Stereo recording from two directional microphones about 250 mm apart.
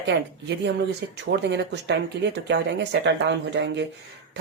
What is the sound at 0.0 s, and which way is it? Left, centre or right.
Speech, right.